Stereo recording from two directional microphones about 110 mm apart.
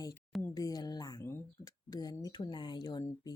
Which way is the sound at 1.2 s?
25° left (ahead or behind).